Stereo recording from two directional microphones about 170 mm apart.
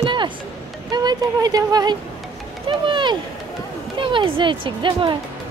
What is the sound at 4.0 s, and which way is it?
Speech, 30° right (ahead or behind).